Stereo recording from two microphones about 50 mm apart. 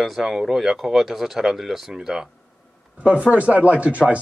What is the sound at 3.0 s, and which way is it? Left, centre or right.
Speech, right.